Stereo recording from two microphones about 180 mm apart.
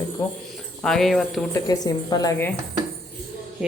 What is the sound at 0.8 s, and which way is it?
Speech, centre (ahead or behind).